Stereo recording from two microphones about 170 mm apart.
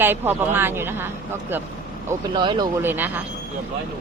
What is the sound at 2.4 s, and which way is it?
Speech, 25° right (ahead or behind).